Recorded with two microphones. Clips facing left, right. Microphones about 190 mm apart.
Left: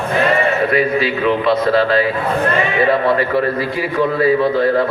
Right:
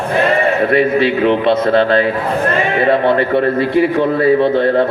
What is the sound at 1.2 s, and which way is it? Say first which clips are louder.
Speech: right 2 dB; 25° right (ahead or behind).